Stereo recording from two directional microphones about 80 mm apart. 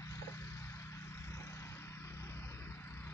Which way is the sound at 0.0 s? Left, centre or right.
Left.